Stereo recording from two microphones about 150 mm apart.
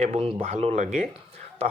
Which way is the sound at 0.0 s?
40° right (ahead or behind).